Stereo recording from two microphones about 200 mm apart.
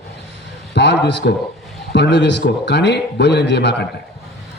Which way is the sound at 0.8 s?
60° left (ahead or behind).